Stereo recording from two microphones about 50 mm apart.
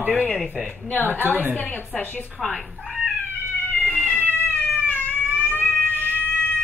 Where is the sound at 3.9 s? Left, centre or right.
Left.